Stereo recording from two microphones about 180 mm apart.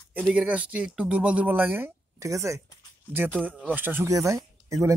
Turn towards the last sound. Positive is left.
turn(degrees=-15)  # may be behind; listen again after turning